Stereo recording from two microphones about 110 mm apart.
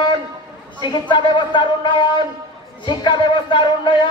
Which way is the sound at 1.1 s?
45° left (ahead or behind).